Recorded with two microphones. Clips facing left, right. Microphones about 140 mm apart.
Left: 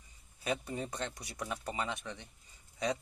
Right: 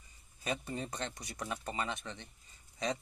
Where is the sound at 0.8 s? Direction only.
15° right (ahead or behind).